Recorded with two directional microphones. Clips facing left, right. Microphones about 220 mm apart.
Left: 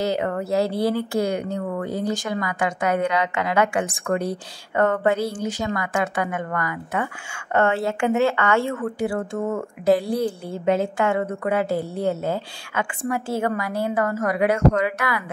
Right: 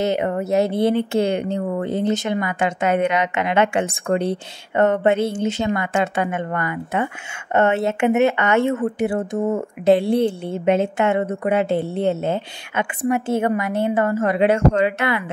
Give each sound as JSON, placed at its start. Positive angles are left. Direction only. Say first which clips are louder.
{"t": 0.0, "sound": "speech", "louder": "right 3 dB", "side_deg": -20}